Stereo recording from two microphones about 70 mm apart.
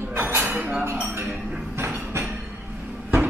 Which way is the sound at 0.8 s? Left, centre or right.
Right.